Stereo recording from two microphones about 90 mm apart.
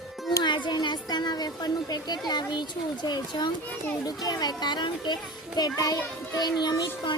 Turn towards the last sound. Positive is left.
turn(degrees=50)  # may be behind; listen again after turning